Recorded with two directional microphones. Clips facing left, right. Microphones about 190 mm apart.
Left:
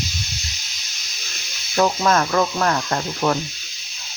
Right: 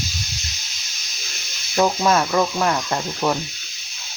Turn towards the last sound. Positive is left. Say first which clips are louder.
# left 1 dB
turn(degrees=-10)  # may be behind; listen again after turning